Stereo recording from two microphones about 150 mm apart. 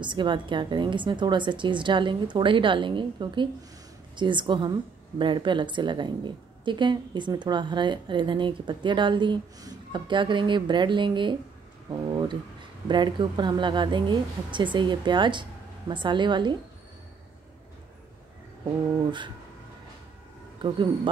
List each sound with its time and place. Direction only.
0.0 s speech: 30° right (ahead or behind)
19.0 s speech: 30° right (ahead or behind)
20.6 s speech: 30° right (ahead or behind)